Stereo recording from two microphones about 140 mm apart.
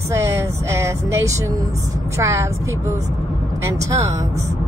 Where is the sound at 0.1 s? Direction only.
20° right (ahead or behind).